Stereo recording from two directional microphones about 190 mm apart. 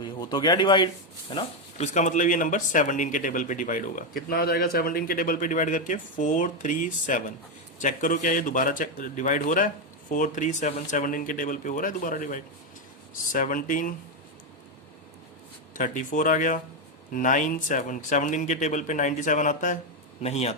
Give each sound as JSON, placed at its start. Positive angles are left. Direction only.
{"t": 0.0, "sound": "speech", "side_deg": 25}
{"t": 1.9, "sound": "speech", "side_deg": 40}
{"t": 15.7, "sound": "speech", "side_deg": 45}